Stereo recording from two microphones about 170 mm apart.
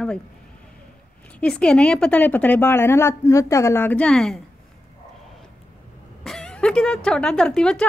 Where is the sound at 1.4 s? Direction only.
5° left (ahead or behind).